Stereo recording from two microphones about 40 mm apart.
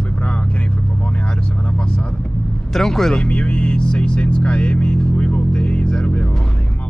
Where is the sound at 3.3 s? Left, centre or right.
Left.